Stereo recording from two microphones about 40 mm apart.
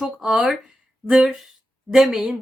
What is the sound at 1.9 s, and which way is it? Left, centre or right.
Speech, centre.